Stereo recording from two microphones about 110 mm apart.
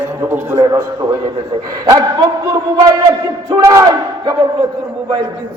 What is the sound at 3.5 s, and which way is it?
Speech, 30° right (ahead or behind).